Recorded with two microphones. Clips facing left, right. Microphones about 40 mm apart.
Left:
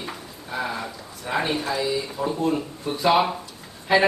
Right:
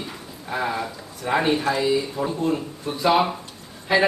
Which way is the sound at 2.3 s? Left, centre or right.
Centre.